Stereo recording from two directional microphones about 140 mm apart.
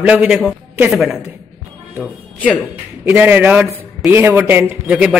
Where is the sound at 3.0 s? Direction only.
15° right (ahead or behind).